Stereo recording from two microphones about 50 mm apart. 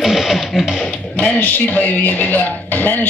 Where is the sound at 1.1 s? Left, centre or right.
Left.